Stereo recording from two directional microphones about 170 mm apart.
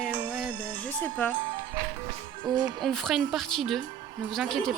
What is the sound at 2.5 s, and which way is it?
Speech, 25° right (ahead or behind).